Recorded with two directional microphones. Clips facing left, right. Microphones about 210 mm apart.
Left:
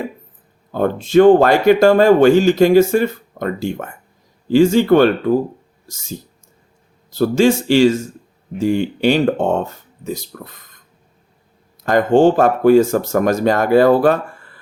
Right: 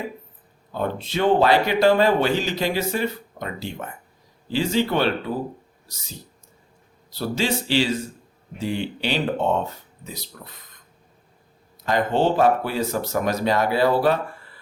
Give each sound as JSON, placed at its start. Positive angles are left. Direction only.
{"t": 0.7, "sound": "speech", "side_deg": 50}
{"t": 7.1, "sound": "speech", "side_deg": 45}
{"t": 11.8, "sound": "speech", "side_deg": 50}